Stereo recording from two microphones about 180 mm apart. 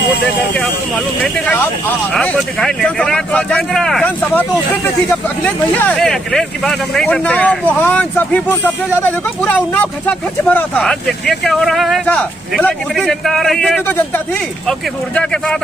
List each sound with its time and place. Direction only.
1.2 s speech: 5° left (ahead or behind)